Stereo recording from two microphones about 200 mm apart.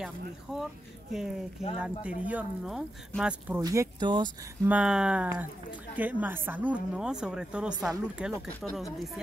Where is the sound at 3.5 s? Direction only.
15° right (ahead or behind).